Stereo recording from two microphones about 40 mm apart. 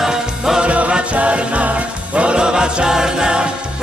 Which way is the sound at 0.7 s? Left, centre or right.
Right.